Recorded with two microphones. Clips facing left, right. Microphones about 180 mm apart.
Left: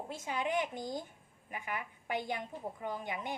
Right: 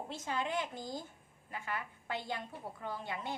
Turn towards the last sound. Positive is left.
turn(degrees=15)  # may be behind; listen again after turning